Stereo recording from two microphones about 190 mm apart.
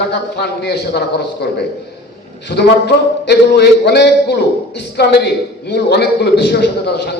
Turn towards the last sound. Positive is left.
turn(degrees=60)  # may be behind; listen again after turning